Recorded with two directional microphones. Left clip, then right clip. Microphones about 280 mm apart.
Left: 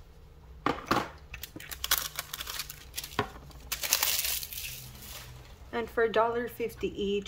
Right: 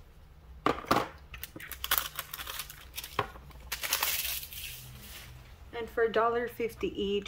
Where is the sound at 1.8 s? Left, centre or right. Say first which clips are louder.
Left 1 dB; centre.